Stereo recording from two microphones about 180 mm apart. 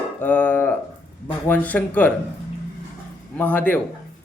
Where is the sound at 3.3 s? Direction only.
10° left (ahead or behind).